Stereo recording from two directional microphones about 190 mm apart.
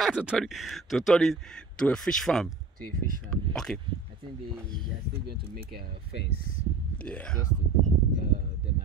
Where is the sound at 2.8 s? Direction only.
45° right (ahead or behind).